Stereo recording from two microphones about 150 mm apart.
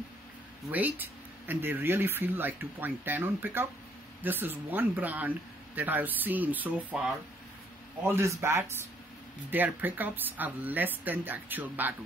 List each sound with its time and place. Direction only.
0.7 s speech: 10° right (ahead or behind)
8.0 s speech: 15° right (ahead or behind)